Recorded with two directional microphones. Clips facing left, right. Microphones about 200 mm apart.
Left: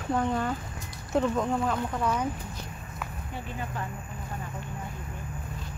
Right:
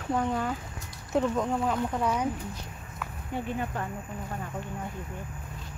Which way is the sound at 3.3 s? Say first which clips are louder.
Right 6 dB; 55° right (ahead or behind).